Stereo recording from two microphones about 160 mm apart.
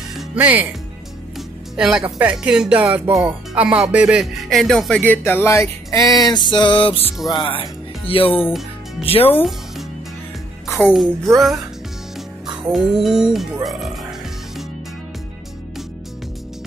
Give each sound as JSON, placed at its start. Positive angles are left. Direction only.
{"t": 0.4, "sound": "speech", "side_deg": -10}
{"t": 1.8, "sound": "music", "side_deg": -5}
{"t": 2.1, "sound": "speech", "side_deg": -10}
{"t": 2.8, "sound": "speech", "side_deg": -15}
{"t": 3.2, "sound": "music", "side_deg": -5}
{"t": 6.6, "sound": "speech", "side_deg": 35}
{"t": 10.9, "sound": "music", "side_deg": 0}
{"t": 12.7, "sound": "music", "side_deg": 0}